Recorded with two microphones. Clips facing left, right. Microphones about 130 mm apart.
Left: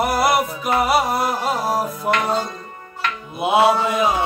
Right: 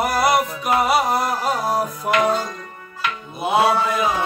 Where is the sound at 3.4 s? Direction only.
25° left (ahead or behind).